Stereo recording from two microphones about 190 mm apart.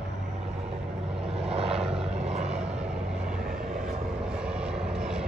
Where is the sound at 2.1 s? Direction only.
35° right (ahead or behind).